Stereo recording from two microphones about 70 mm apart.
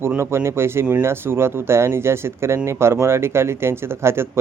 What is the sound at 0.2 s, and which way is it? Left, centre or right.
Speech, right.